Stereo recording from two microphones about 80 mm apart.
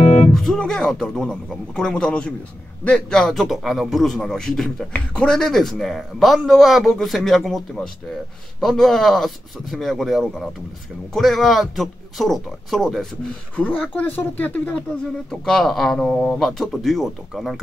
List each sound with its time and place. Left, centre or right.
0.3 s a man's voice: centre
13.6 s speech: centre
15.4 s a man's voice: centre